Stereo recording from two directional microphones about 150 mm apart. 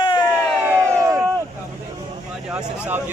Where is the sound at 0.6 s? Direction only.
15° right (ahead or behind).